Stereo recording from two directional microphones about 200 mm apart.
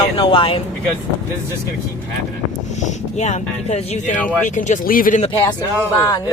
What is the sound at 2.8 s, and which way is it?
Speech, 35° left (ahead or behind).